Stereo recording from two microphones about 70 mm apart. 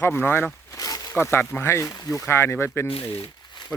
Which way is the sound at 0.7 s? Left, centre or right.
Left.